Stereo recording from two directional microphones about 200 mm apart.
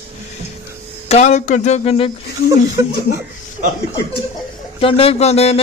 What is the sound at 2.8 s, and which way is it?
Speech, 15° right (ahead or behind).